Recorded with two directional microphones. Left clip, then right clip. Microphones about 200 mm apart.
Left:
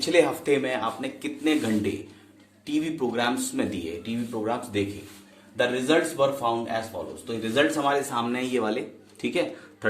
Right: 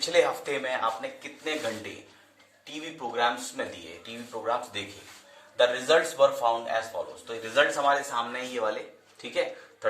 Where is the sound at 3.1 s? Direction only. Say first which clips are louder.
Left 1 dB; 55° left (ahead or behind).